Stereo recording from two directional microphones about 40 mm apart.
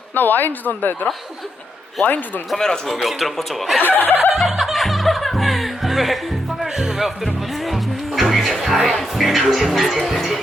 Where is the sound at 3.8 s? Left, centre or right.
Left.